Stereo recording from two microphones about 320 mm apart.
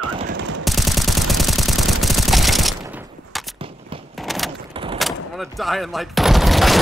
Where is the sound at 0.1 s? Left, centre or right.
Centre.